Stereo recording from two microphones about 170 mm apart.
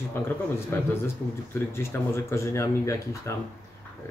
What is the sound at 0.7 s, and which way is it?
Speech, 15° left (ahead or behind).